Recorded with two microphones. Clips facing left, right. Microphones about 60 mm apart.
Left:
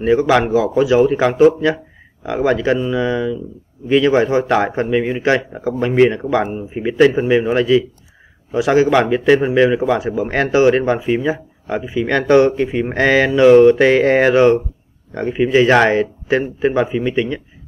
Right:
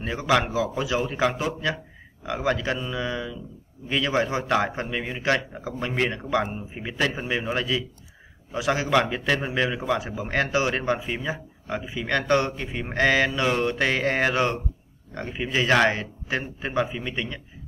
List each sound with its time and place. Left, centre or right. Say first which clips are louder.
0.0 s a man's voice: left 10 dB; centre
4.6 s speech: left 12 dB; left
8.5 s speech: left 9 dB; centre
9.0 s speech: left 12 dB; left
9.8 s a man's voice: left 9 dB; centre
11.1 s speech: left 12 dB; left
12.1 s a man's voice: left 10 dB; centre
12.4 s speech: left 14 dB; left
12.9 s a man's voice: left 6 dB; centre